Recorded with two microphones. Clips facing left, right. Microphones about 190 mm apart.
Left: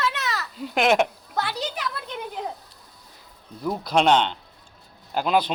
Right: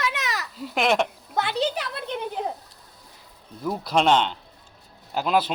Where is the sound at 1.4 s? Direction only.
20° right (ahead or behind).